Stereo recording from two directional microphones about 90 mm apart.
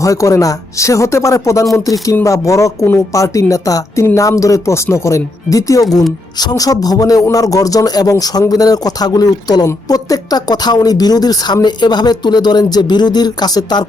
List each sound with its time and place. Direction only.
0.0 s speech: 35° left (ahead or behind)